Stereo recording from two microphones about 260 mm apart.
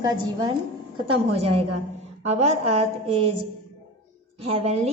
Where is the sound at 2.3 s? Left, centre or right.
Right.